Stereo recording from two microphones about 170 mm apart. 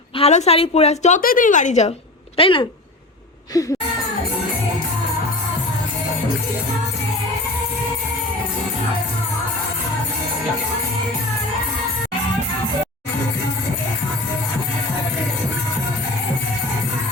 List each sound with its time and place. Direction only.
0.2 s a woman's voice: 40° left (ahead or behind)
1.2 s a woman's voice: 55° left (ahead or behind)
2.4 s a woman's voice: 30° left (ahead or behind)
3.5 s music: 20° left (ahead or behind)